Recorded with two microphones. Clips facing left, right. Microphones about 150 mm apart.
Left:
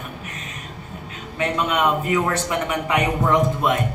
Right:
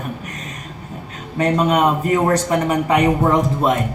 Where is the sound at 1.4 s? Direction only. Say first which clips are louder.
Right 5 dB; 40° right (ahead or behind).